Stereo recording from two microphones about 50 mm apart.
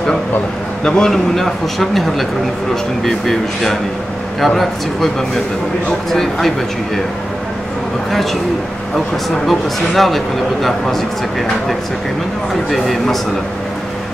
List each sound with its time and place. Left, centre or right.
0.8 s speech: centre
1.1 s a man's voice: centre
9.5 s a man's voice: centre
12.7 s a man's voice: centre